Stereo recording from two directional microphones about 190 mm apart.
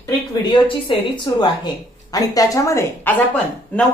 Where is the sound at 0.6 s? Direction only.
25° left (ahead or behind).